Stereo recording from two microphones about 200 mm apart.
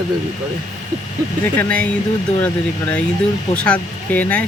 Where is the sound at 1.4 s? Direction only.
10° left (ahead or behind).